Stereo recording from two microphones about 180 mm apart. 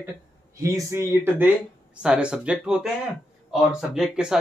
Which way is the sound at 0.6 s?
15° right (ahead or behind).